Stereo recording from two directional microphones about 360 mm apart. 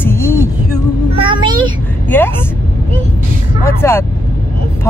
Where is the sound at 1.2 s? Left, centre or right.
Centre.